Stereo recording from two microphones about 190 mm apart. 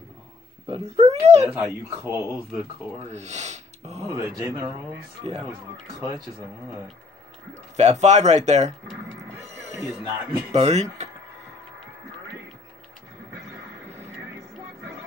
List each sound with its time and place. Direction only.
0.7 s speech: 35° right (ahead or behind)
1.4 s speech: 10° right (ahead or behind)
3.1 s speech: 35° right (ahead or behind)
4.4 s speech: 10° right (ahead or behind)
5.9 s speech: 15° right (ahead or behind)
7.5 s speech: 35° right (ahead or behind)
9.7 s speech: 15° right (ahead or behind)
10.5 s speech: 35° right (ahead or behind)